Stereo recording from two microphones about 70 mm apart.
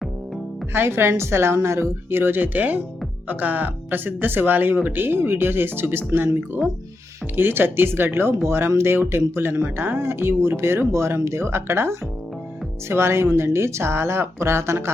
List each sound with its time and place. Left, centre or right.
0.7 s speech: right